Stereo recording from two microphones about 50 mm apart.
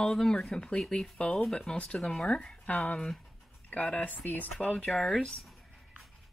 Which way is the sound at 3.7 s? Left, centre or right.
Left.